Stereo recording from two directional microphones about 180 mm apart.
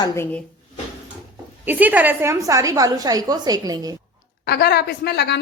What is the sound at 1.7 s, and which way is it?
A woman's voice, 10° right (ahead or behind).